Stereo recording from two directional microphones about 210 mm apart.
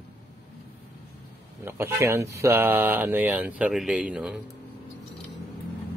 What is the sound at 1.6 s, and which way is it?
Speech, 10° right (ahead or behind).